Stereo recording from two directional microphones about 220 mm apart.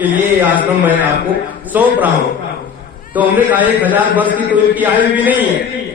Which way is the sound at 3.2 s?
5° right (ahead or behind).